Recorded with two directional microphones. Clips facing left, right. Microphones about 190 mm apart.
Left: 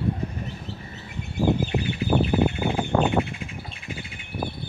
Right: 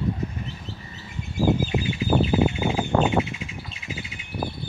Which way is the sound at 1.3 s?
60° left (ahead or behind).